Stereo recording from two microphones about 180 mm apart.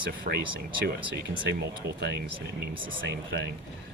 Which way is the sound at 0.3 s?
50° right (ahead or behind).